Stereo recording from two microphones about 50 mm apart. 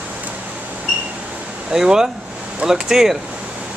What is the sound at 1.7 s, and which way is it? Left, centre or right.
Speech, centre.